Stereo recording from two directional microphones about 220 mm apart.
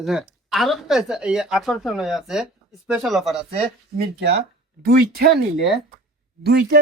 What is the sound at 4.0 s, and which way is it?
Speech, 50° right (ahead or behind).